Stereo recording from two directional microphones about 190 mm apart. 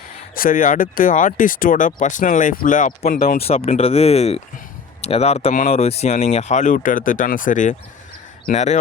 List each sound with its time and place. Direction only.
0.3 s speech: 45° left (ahead or behind)
3.4 s speech: 30° left (ahead or behind)